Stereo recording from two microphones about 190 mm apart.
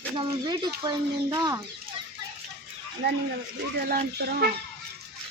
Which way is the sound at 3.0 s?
60° right (ahead or behind).